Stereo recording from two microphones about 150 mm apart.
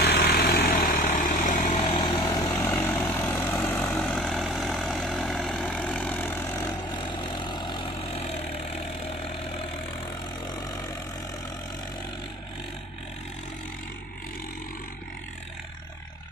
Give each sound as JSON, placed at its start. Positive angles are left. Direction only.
{"t": 0.0, "sound": "vehicle", "side_deg": 75}
{"t": 1.9, "sound": "vehicle", "side_deg": 40}
{"t": 2.1, "sound": "vehicle", "side_deg": 25}
{"t": 2.4, "sound": "vehicle", "side_deg": 15}
{"t": 6.7, "sound": "vehicle", "side_deg": 30}